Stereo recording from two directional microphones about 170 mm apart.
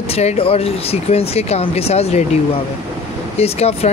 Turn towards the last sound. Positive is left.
turn(degrees=35)  # may be behind; listen again after turning